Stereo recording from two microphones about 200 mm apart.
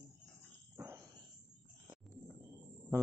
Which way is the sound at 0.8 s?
10° right (ahead or behind).